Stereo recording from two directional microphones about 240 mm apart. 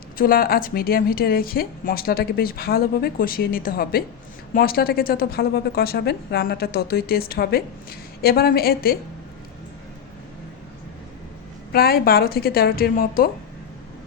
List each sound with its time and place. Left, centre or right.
0.2 s a woman's voice: left
11.7 s a woman's voice: left